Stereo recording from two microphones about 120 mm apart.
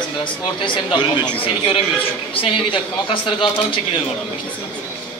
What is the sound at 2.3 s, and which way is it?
A man's voice, 50° left (ahead or behind).